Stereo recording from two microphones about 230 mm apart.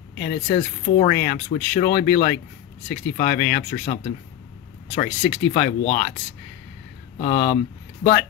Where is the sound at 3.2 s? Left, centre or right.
Left.